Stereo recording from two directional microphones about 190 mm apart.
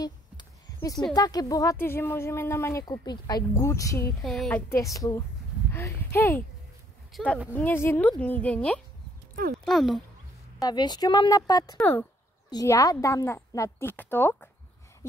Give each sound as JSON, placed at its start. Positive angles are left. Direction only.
{"t": 0.7, "sound": "speech", "side_deg": 20}
{"t": 4.2, "sound": "speech", "side_deg": 0}
{"t": 7.1, "sound": "speech", "side_deg": 0}
{"t": 9.3, "sound": "clip-clop", "side_deg": -50}
{"t": 9.7, "sound": "speech", "side_deg": 0}
{"t": 10.6, "sound": "a woman's voice", "side_deg": 20}
{"t": 11.7, "sound": "speech", "side_deg": 10}